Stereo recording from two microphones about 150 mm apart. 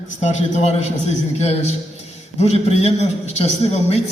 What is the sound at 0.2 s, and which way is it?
A man's voice, 50° left (ahead or behind).